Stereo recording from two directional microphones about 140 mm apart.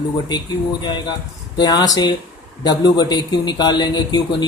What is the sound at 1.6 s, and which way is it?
Speech, 30° left (ahead or behind).